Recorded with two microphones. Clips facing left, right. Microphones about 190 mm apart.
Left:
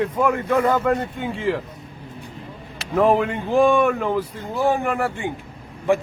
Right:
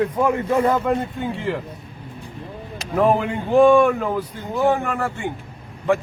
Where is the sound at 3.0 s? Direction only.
Centre (ahead or behind).